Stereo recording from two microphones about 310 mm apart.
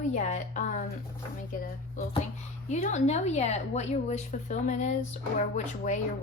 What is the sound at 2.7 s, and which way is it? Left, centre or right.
A woman's voice, left.